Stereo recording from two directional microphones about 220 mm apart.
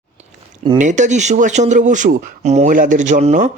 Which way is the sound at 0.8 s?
35° right (ahead or behind).